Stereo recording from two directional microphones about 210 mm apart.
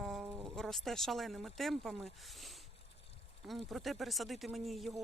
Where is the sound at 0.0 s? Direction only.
Centre (ahead or behind).